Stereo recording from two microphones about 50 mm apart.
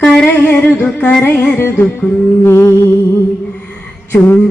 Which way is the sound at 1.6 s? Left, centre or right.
Left.